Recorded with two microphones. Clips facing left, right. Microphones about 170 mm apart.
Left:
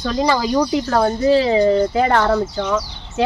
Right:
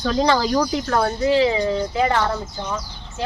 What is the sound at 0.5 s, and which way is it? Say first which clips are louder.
Speech: left 3 dB; 25° left (ahead or behind).